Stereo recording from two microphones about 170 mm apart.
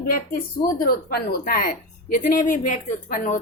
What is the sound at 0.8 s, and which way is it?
Speech, 60° left (ahead or behind).